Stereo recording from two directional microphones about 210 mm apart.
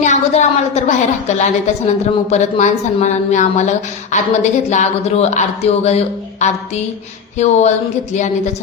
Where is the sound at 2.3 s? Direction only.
35° left (ahead or behind).